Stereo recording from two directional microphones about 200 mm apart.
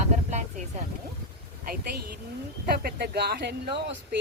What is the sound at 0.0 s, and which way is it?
Vehicle, 35° right (ahead or behind).